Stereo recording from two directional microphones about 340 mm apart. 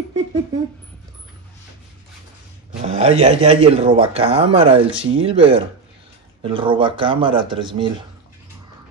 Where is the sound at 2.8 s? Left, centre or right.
Centre.